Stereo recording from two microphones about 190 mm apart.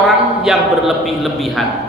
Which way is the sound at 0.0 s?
Centre (ahead or behind).